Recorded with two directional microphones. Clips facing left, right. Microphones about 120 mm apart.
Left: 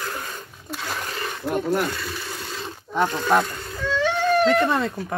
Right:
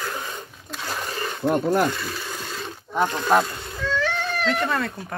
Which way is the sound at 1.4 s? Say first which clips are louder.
Right 3 dB; 50° right (ahead or behind).